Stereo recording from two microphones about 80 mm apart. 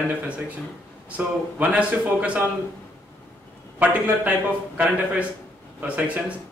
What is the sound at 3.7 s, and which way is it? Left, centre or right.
Speech, right.